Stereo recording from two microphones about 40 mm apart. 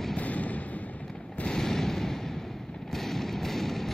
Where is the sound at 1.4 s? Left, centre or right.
Centre.